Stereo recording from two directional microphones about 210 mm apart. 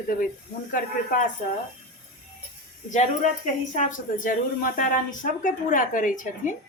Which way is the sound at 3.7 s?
40° left (ahead or behind).